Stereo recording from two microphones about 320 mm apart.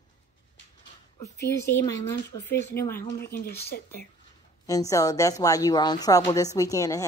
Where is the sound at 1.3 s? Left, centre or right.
Left.